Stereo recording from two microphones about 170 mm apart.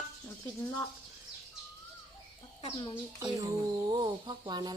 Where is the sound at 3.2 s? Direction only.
25° right (ahead or behind).